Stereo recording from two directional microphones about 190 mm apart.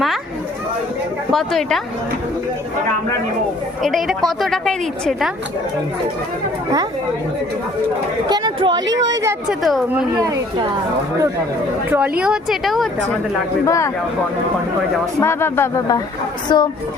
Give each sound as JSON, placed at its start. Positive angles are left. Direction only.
{"t": 1.3, "sound": "a woman's voice", "side_deg": 0}
{"t": 3.8, "sound": "a woman's voice", "side_deg": 0}
{"t": 8.3, "sound": "speech", "side_deg": -25}
{"t": 9.5, "sound": "a woman's voice", "side_deg": 0}
{"t": 10.2, "sound": "speech", "side_deg": -20}
{"t": 11.9, "sound": "a woman's voice", "side_deg": -5}
{"t": 13.7, "sound": "speech", "side_deg": 15}
{"t": 15.2, "sound": "speech", "side_deg": 15}